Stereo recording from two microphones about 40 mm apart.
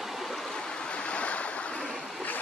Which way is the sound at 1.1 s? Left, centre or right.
Left.